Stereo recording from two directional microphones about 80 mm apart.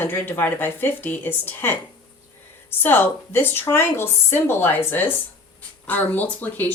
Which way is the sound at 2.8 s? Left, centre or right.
Left.